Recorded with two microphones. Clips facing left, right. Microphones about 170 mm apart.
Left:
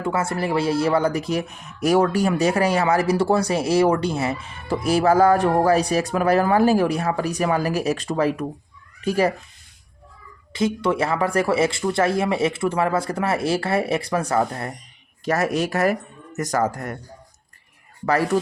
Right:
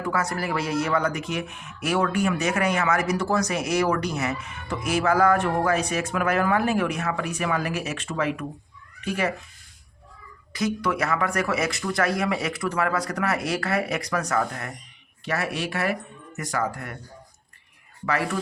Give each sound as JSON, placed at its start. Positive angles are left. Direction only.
{"t": 0.0, "sound": "speech", "side_deg": 25}
{"t": 10.5, "sound": "speech", "side_deg": 25}
{"t": 18.0, "sound": "speech", "side_deg": 40}